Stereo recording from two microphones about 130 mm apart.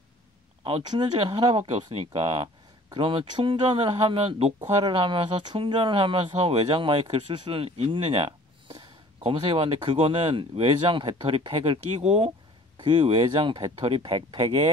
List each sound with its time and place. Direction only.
0.8 s speech: 40° right (ahead or behind)
1.6 s speech: 50° right (ahead or behind)
4.6 s speech: 40° right (ahead or behind)
12.0 s speech: 60° right (ahead or behind)
12.7 s speech: 40° right (ahead or behind)